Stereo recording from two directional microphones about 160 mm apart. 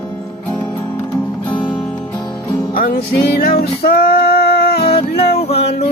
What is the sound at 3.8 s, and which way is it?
Female singing, 75° left (ahead or behind).